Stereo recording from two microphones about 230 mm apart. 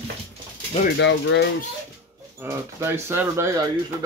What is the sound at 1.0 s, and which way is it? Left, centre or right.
Speech, left.